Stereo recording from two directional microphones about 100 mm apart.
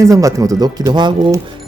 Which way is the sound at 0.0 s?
35° right (ahead or behind).